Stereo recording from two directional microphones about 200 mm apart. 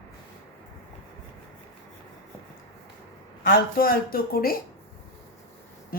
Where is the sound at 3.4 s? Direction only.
45° left (ahead or behind).